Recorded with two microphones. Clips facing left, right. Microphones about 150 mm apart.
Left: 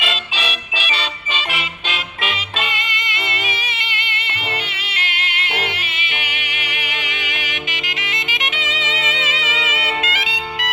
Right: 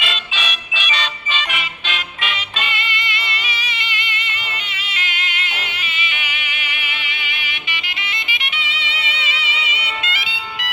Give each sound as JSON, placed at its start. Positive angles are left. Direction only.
{"t": 0.0, "sound": "music", "side_deg": 30}
{"t": 2.2, "sound": "music", "side_deg": 40}
{"t": 4.9, "sound": "music", "side_deg": 70}
{"t": 6.8, "sound": "music", "side_deg": 90}
{"t": 9.8, "sound": "music", "side_deg": 45}